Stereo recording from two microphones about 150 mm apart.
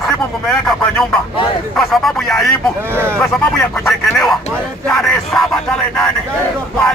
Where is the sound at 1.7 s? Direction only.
Centre (ahead or behind).